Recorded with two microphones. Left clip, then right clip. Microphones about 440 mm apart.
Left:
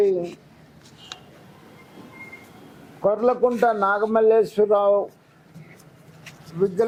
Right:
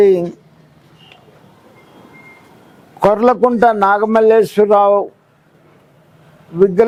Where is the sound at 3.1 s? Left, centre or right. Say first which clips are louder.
Right 7 dB; right.